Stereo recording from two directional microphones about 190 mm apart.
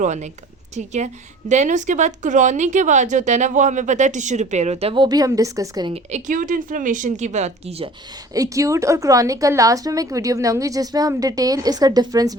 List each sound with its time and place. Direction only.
0.0 s a woman's voice: 40° right (ahead or behind); by 5.9 s 20° right (ahead or behind)
5.9 s a woman's voice: 35° right (ahead or behind)
8.3 s a woman's voice: 15° right (ahead or behind)